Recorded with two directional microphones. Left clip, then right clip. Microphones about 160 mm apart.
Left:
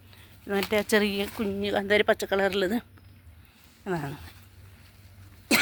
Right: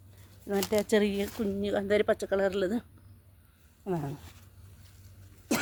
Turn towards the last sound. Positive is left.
turn(degrees=25)  # may be behind; listen again after turning